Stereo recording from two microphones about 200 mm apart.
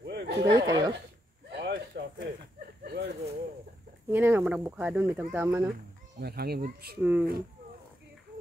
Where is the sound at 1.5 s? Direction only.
55° right (ahead or behind).